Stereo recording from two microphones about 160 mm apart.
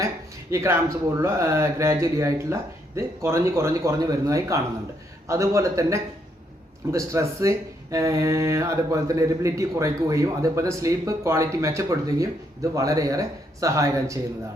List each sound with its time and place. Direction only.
0.5 s speech: 20° right (ahead or behind)